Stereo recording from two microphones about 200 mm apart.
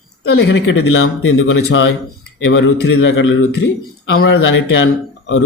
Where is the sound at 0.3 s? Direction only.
70° left (ahead or behind).